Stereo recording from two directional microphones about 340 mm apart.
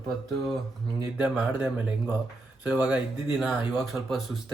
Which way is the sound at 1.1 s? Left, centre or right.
Centre.